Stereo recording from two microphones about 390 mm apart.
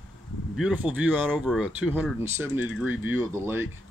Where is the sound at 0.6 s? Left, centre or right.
Centre.